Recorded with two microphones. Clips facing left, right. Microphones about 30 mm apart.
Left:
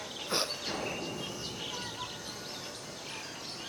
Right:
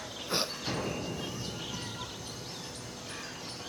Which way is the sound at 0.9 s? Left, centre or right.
Centre.